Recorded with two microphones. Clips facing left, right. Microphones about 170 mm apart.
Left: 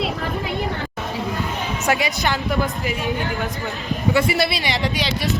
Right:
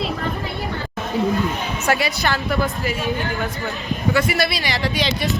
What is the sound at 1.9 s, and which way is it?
A woman's voice, 15° left (ahead or behind).